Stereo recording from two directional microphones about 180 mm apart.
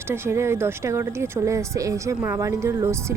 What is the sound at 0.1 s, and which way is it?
A woman's voice, 15° right (ahead or behind).